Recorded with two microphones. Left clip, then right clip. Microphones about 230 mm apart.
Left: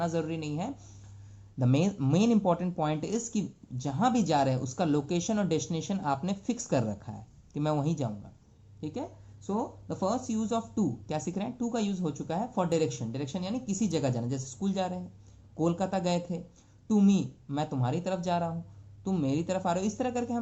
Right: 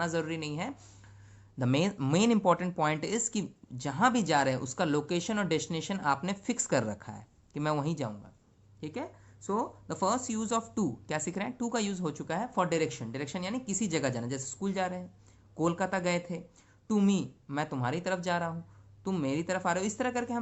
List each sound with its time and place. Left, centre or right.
0.0 s speech: right